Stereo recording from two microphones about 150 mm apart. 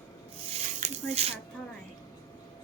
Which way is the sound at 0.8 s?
45° right (ahead or behind).